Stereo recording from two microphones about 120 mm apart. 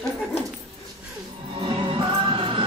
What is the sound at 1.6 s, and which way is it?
Music, 45° right (ahead or behind).